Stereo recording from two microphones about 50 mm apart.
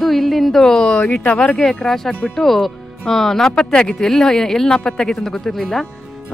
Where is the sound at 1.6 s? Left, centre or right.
Centre.